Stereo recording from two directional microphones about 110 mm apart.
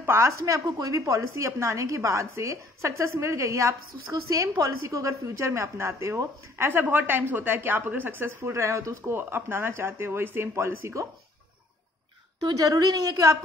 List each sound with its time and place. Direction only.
0.0 s a woman's voice: 25° right (ahead or behind)
12.4 s a woman's voice: 35° right (ahead or behind)